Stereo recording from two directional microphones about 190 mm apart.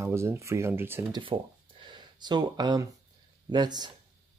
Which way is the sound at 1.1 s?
25° right (ahead or behind).